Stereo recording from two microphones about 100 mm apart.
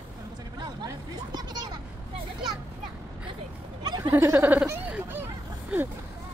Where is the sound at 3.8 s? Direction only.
40° right (ahead or behind).